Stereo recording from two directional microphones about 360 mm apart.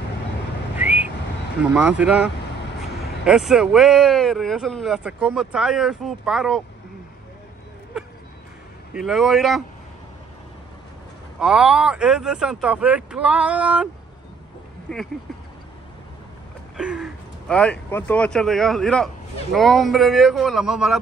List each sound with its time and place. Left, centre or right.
0.7 s whistling: centre
1.6 s speech: centre
3.3 s speech: centre
8.9 s speech: centre
11.3 s speech: centre
14.9 s speech: centre
16.7 s speech: centre